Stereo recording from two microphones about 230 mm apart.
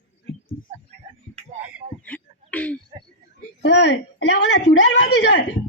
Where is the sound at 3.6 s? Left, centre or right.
Left.